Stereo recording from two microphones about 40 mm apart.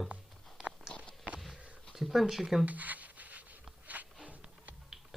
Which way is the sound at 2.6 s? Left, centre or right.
Right.